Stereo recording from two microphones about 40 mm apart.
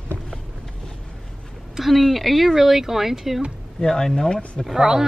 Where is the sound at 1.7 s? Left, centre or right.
Centre.